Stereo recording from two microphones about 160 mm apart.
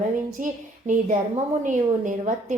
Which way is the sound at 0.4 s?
55° right (ahead or behind).